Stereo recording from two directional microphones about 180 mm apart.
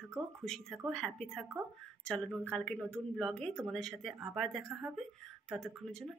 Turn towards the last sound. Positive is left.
turn(degrees=5)  # may be behind; listen again after turning